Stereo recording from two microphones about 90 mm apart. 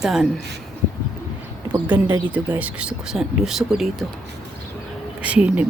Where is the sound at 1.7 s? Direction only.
20° right (ahead or behind).